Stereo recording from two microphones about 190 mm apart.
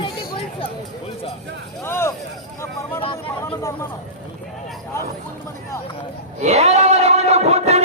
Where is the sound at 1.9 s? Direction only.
15° left (ahead or behind).